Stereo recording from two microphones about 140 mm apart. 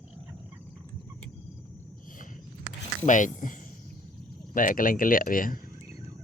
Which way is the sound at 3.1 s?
65° left (ahead or behind).